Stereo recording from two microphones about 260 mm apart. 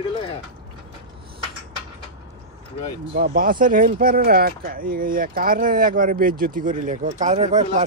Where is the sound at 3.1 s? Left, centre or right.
Right.